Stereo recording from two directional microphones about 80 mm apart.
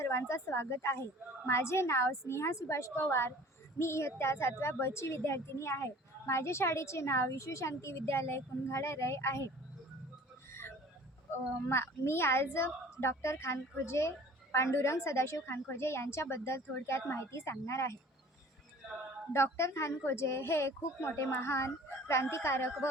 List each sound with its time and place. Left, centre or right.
0.0 s a woman's voice: left
10.5 s a sound: left
11.7 s a woman's voice: left
19.3 s a woman's voice: left